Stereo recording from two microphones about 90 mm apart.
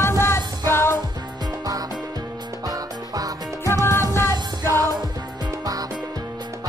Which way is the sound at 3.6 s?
30° left (ahead or behind).